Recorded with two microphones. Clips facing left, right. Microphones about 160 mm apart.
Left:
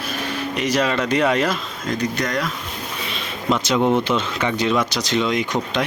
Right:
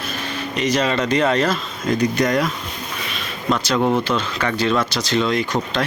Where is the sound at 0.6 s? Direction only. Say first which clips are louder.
Right 1 dB; 10° left (ahead or behind).